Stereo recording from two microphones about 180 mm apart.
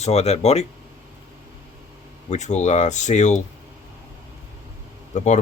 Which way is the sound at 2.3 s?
40° left (ahead or behind).